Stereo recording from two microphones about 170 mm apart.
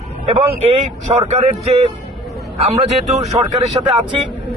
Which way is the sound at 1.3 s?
40° right (ahead or behind).